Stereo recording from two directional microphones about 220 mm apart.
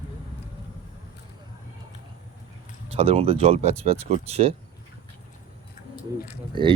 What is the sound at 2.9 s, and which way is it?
Speech, 25° right (ahead or behind).